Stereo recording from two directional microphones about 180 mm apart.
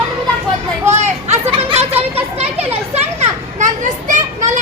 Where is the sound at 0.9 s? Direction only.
35° right (ahead or behind).